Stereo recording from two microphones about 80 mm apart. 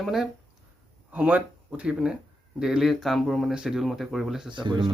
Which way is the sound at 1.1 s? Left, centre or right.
Centre.